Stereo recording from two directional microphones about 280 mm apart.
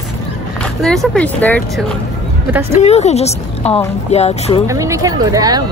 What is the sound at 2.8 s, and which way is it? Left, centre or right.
Speech, left.